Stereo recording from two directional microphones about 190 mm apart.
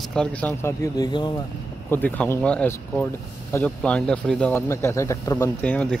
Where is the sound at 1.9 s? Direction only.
10° left (ahead or behind).